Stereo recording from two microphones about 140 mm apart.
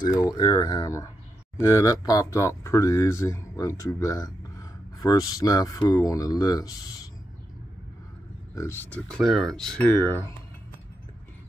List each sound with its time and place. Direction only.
0.2 s speech: 30° left (ahead or behind)
8.5 s speech: 15° left (ahead or behind)
9.0 s speech: 5° left (ahead or behind)